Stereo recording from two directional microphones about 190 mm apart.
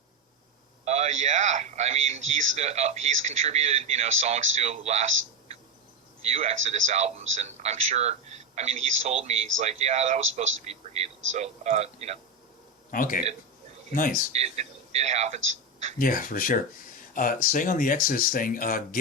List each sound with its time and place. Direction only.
0.9 s speech: 35° right (ahead or behind)
6.3 s speech: 35° right (ahead or behind)
12.9 s speech: 45° left (ahead or behind)
14.3 s speech: 35° right (ahead or behind)
16.0 s speech: 45° left (ahead or behind)